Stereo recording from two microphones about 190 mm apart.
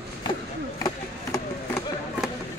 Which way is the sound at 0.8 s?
15° left (ahead or behind).